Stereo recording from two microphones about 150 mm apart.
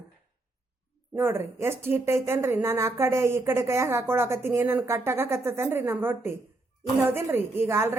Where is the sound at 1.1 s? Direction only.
15° right (ahead or behind).